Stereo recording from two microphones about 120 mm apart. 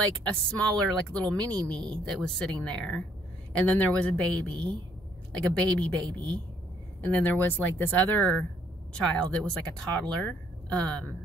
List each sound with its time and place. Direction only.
0.0 s speech: 10° left (ahead or behind)
1.6 s speech: 40° right (ahead or behind)
2.0 s speech: 5° left (ahead or behind)
4.5 s a woman's voice: 45° right (ahead or behind)
5.3 s a woman's voice: 10° left (ahead or behind)